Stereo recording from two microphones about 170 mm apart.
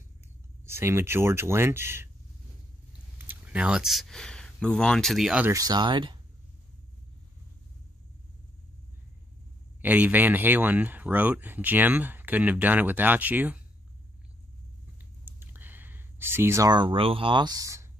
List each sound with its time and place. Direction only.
0.7 s speech: 15° right (ahead or behind)
3.3 s speech: 5° right (ahead or behind)
5.5 s speech: 20° right (ahead or behind)
9.8 s speech: 10° right (ahead or behind)
15.0 s a sound: 10° right (ahead or behind)